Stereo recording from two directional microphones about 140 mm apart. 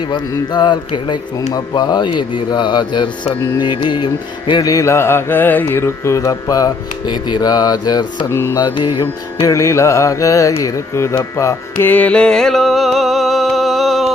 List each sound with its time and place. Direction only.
0.1 s speech: 30° left (ahead or behind)
3.6 s mantra: 35° left (ahead or behind)
8.5 s speech: 30° left (ahead or behind)
9.5 s mantra: 20° left (ahead or behind)
10.6 s carnatic music: 20° left (ahead or behind); by 14.1 s centre (ahead or behind)